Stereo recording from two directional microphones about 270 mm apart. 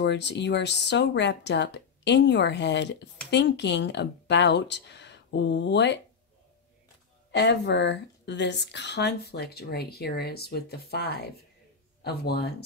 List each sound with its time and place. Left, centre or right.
0.0 s speech: left
7.2 s speech: left